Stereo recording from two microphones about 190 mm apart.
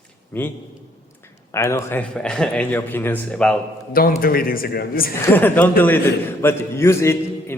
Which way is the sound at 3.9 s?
50° left (ahead or behind).